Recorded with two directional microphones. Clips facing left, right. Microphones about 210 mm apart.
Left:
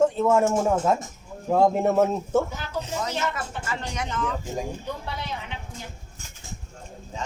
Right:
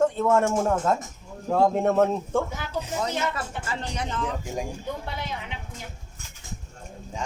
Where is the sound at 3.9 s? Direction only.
35° right (ahead or behind).